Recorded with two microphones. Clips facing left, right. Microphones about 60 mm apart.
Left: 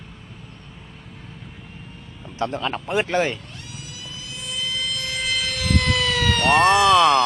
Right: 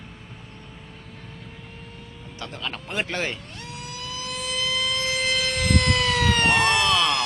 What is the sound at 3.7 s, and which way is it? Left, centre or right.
Emergency vehicle, right.